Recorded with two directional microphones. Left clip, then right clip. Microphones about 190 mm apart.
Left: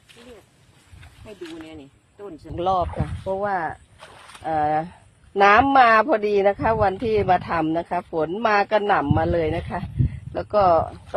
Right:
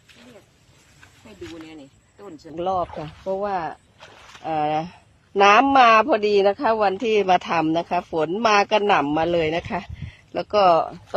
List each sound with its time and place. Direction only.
2.2 s speech: centre (ahead or behind)
3.4 s speech: 15° right (ahead or behind)
4.0 s a sound: 10° left (ahead or behind)
4.4 s speech: 20° right (ahead or behind)